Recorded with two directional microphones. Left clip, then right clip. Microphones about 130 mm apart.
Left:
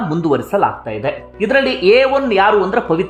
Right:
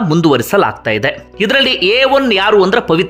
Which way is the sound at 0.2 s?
30° right (ahead or behind).